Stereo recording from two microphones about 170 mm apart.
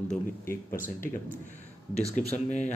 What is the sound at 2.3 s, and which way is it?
Speech, 40° left (ahead or behind).